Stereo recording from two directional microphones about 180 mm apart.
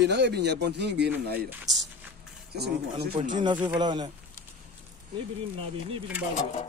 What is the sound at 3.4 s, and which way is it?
Speech, 25° right (ahead or behind).